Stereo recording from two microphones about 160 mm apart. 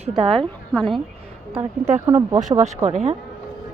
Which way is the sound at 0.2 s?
35° right (ahead or behind).